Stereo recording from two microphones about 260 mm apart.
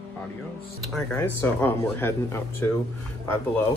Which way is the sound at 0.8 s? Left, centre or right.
Centre.